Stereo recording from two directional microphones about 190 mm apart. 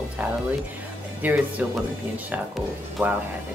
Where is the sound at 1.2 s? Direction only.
10° right (ahead or behind).